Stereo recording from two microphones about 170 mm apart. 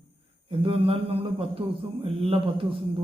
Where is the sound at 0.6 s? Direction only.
35° right (ahead or behind).